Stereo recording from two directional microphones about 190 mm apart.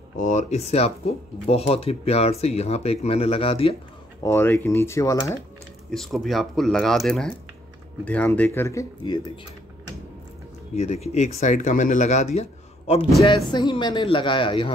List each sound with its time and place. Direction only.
0.2 s speech: 40° left (ahead or behind)
4.2 s speech: 15° left (ahead or behind)
5.9 s speech: centre (ahead or behind); by 9.2 s 20° left (ahead or behind)
10.8 s speech: 35° left (ahead or behind)
13.2 s a man's voice: 25° left (ahead or behind)